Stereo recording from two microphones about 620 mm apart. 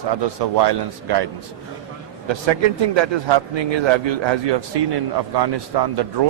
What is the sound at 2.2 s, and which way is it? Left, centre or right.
A man's voice, right.